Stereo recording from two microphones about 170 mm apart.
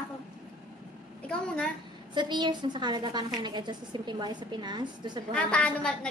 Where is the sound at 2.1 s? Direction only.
25° right (ahead or behind).